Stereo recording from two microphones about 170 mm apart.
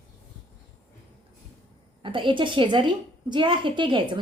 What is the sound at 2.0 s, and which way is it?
A woman's voice, 30° right (ahead or behind).